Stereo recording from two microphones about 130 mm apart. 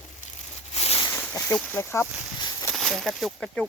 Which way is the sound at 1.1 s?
15° left (ahead or behind).